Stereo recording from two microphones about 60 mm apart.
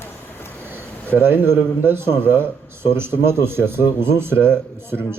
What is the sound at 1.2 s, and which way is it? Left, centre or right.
Speech, right.